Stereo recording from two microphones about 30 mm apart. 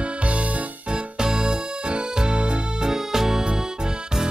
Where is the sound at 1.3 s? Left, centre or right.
Right.